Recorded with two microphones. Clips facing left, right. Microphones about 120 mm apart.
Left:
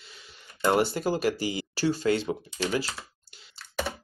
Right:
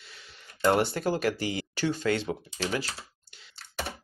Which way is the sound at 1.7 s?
35° left (ahead or behind).